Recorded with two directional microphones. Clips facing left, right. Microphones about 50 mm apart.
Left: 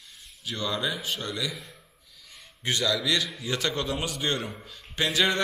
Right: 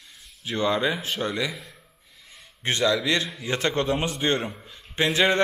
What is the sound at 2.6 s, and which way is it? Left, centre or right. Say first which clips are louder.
Speech: right 4 dB; right.